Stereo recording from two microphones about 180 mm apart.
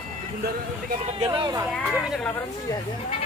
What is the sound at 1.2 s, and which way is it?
Speech, 20° right (ahead or behind).